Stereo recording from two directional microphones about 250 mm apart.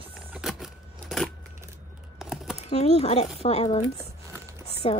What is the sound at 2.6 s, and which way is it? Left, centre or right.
Speech, left.